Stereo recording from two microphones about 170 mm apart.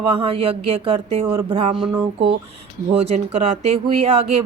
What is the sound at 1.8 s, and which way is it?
Speech, 10° right (ahead or behind).